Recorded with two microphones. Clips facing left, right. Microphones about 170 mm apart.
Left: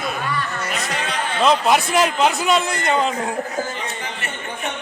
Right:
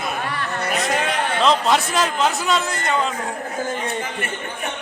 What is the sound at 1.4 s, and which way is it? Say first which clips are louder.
A man's voice: left 2 dB; 10° left (ahead or behind).